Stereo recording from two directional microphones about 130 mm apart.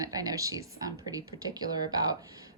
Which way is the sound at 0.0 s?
30° right (ahead or behind).